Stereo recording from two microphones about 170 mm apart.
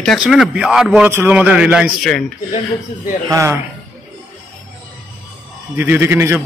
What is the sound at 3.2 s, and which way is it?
Speech, 20° right (ahead or behind).